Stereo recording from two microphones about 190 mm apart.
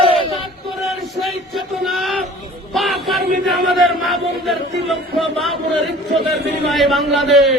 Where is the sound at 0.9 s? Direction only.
Centre (ahead or behind).